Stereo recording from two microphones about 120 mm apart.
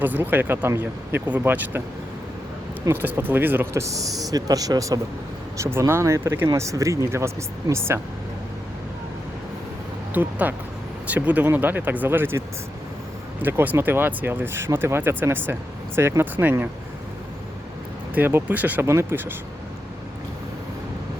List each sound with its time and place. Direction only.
0.0 s speech: 15° right (ahead or behind)
2.9 s speech: 15° right (ahead or behind)
10.2 s speech: 15° right (ahead or behind)
13.4 s speech: 20° right (ahead or behind)
18.1 s speech: 15° right (ahead or behind)